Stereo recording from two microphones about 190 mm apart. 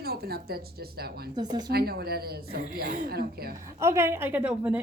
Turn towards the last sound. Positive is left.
turn(degrees=-5)  # may be behind; listen again after turning